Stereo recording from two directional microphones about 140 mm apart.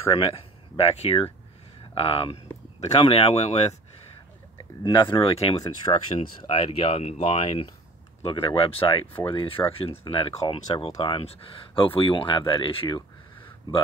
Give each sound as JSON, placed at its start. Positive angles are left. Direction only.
{"t": 0.1, "sound": "speech", "side_deg": 45}
{"t": 4.8, "sound": "speech", "side_deg": 35}
{"t": 5.8, "sound": "speech", "side_deg": 30}